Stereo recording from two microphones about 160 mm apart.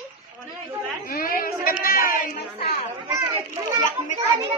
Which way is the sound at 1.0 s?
65° left (ahead or behind).